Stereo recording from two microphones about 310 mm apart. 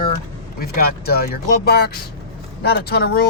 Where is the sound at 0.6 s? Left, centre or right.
Left.